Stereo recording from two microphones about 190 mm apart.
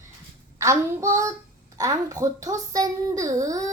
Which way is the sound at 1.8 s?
15° right (ahead or behind).